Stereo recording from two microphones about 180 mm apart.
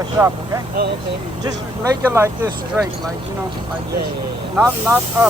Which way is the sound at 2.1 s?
15° right (ahead or behind).